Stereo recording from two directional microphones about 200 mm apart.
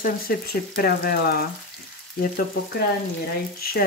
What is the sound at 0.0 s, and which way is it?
Speech, 45° left (ahead or behind).